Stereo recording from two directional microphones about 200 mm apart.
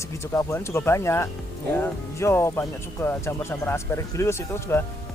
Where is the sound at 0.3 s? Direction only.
15° left (ahead or behind).